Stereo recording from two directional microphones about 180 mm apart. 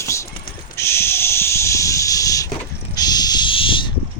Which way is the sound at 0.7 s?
15° left (ahead or behind).